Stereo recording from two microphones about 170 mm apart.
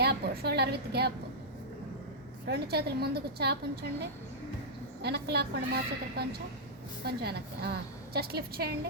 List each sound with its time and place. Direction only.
0.0 s a woman's voice: 70° right (ahead or behind)
2.5 s a woman's voice: 70° right (ahead or behind)
5.0 s a woman's voice: 75° right (ahead or behind)